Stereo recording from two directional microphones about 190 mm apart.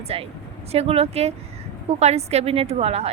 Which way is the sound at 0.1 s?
30° right (ahead or behind).